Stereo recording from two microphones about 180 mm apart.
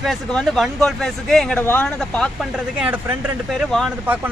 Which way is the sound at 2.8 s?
10° right (ahead or behind).